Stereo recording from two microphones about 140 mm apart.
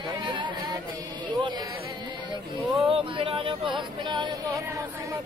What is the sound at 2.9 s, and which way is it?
Speech, 40° right (ahead or behind).